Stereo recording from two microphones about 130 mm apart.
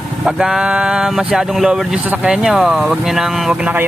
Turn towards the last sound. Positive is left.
turn(degrees=-10)  # may be behind; listen again after turning